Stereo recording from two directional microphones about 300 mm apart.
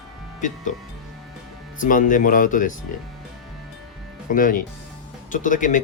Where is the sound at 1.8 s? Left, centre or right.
Left.